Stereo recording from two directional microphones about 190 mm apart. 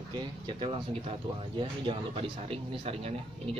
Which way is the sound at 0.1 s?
25° right (ahead or behind).